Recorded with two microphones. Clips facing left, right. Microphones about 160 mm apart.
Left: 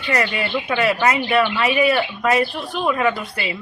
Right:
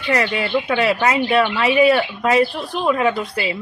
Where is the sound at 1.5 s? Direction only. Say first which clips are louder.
Right 3 dB; 20° right (ahead or behind).